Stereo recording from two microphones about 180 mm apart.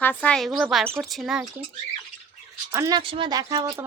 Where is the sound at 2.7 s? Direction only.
15° right (ahead or behind).